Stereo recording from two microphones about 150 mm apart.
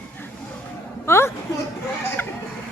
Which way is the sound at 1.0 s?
15° left (ahead or behind).